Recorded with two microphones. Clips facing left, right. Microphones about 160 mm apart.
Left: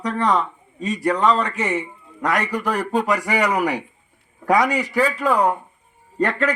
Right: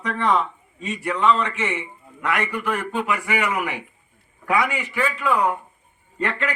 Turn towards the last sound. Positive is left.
turn(degrees=40)  # may be behind; listen again after turning